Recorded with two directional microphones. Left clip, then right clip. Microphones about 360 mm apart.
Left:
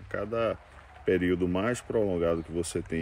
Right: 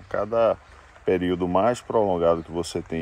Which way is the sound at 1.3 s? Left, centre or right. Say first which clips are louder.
Right 3 dB; right.